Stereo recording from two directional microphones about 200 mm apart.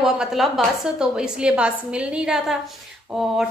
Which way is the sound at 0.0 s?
Centre (ahead or behind).